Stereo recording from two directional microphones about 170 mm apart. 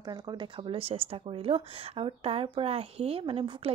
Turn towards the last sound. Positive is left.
turn(degrees=-30)  # may be behind; listen again after turning